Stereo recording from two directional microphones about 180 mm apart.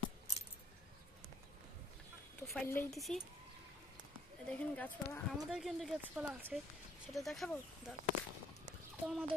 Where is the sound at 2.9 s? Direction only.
Centre (ahead or behind).